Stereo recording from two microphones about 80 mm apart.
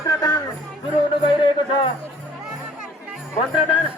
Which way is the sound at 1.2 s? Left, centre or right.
Left.